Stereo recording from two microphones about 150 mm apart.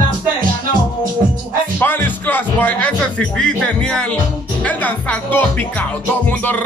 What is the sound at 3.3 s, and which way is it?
Speech, 5° left (ahead or behind).